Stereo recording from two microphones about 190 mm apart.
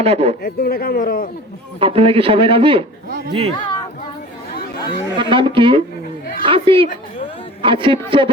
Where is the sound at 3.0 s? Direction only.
50° right (ahead or behind).